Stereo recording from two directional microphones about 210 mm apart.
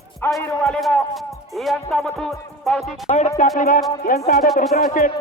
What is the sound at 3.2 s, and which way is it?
Music, 35° left (ahead or behind).